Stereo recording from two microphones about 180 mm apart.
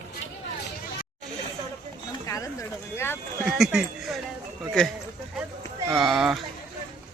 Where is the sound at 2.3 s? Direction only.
15° left (ahead or behind).